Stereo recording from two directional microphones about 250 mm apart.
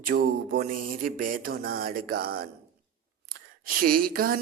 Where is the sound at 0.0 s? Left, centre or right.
Right.